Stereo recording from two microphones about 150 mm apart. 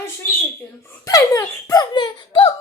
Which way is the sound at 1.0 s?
20° left (ahead or behind).